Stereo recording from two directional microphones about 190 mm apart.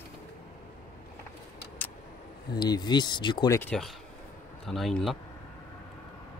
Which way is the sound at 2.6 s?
20° left (ahead or behind).